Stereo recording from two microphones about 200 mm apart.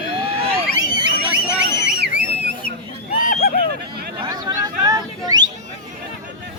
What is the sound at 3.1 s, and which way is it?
Hubbub, 40° left (ahead or behind).